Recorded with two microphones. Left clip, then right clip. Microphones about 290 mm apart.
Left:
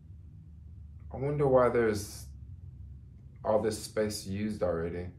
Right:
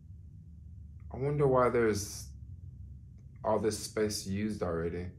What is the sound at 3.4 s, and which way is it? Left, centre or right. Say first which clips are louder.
Speech: left 2 dB; centre.